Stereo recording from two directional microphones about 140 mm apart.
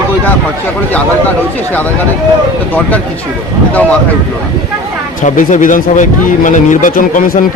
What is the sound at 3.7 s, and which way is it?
Speech, 10° left (ahead or behind).